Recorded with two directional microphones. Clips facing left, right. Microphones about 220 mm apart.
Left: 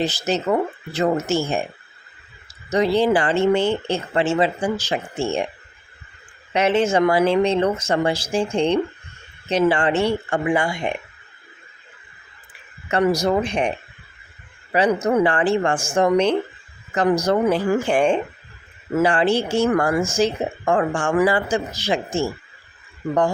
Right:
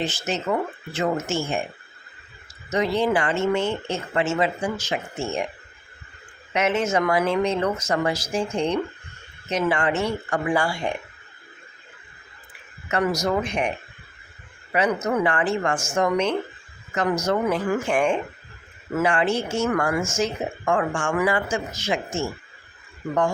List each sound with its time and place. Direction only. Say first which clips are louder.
0.0 s speech: left 5 dB; 40° left (ahead or behind)
2.6 s speech: left 4 dB; 35° left (ahead or behind)
6.5 s speech: left 4 dB; 30° left (ahead or behind)
12.9 s speech: left 4 dB; 30° left (ahead or behind)